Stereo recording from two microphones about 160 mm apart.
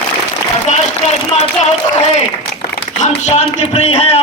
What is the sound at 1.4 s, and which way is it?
Speech, 45° left (ahead or behind).